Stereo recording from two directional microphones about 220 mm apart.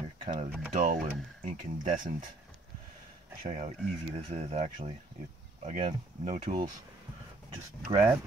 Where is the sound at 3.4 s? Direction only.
30° right (ahead or behind).